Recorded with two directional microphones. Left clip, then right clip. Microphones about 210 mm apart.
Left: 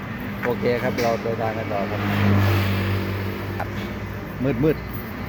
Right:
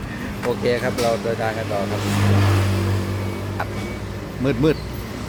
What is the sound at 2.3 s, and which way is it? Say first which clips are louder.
Vehicle: right 1 dB; 45° left (ahead or behind).